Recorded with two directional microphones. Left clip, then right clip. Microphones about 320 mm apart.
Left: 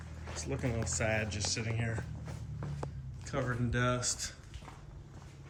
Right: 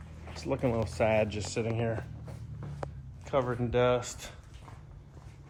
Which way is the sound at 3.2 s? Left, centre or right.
Centre.